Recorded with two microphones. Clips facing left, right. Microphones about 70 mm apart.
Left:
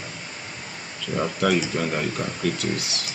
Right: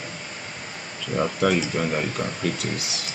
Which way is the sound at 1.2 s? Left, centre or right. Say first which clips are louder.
Right 1 dB; centre.